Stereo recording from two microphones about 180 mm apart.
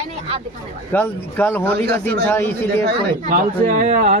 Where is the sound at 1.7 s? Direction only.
60° right (ahead or behind).